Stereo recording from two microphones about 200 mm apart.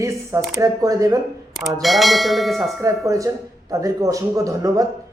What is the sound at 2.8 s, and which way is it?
Speech, 15° right (ahead or behind).